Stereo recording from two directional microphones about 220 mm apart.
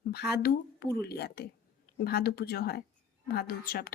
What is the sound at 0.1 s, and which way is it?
Speech, 45° left (ahead or behind).